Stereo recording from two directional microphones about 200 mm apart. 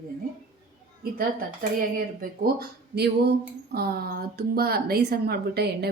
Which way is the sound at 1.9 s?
50° right (ahead or behind).